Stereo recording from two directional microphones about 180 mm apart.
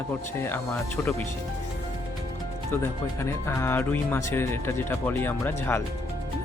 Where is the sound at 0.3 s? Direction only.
15° left (ahead or behind).